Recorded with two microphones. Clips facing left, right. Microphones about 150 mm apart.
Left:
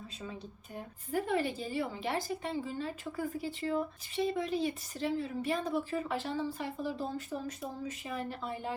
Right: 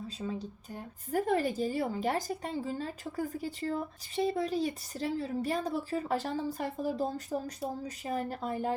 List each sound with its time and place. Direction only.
0.2 s speech: 35° right (ahead or behind)